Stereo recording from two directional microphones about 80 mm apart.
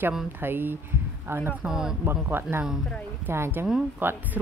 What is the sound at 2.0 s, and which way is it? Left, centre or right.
Speech, right.